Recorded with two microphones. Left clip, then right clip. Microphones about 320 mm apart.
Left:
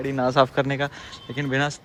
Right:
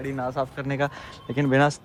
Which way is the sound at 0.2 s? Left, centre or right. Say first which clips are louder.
Left 9 dB; left.